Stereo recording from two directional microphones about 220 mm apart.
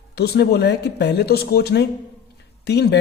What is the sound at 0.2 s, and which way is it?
A man's voice, 45° left (ahead or behind).